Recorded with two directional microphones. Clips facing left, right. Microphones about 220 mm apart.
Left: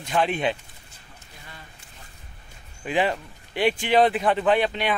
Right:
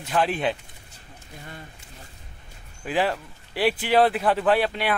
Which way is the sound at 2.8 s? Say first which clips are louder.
Left 1 dB; 5° right (ahead or behind).